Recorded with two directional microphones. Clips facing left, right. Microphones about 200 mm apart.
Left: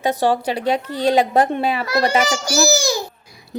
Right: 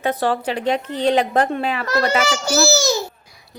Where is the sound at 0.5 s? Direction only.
35° left (ahead or behind).